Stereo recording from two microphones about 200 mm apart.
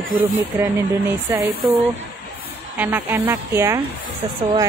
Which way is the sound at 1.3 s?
10° right (ahead or behind).